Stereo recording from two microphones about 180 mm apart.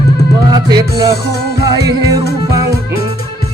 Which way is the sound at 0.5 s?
20° right (ahead or behind).